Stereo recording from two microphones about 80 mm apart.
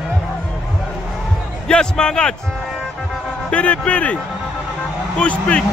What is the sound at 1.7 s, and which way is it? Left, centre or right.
Speech, centre.